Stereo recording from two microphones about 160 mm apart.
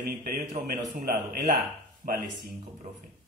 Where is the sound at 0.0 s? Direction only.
70° right (ahead or behind).